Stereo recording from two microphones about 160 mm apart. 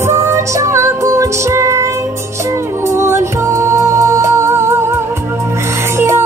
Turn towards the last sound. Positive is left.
turn(degrees=-15)  # may be behind; listen again after turning